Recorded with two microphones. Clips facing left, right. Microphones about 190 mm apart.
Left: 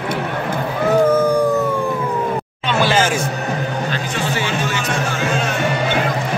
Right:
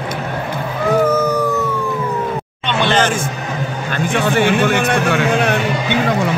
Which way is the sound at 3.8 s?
50° right (ahead or behind).